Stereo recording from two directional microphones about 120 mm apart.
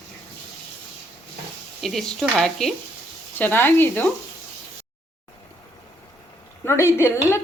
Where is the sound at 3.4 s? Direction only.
15° left (ahead or behind).